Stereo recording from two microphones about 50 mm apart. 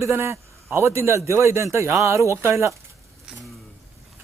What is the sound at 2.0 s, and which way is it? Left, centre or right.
Speech, right.